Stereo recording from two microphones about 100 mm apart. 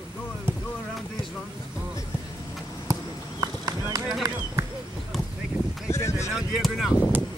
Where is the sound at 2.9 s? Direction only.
35° right (ahead or behind).